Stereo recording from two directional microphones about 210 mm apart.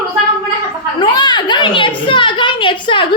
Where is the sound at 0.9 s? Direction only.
20° left (ahead or behind).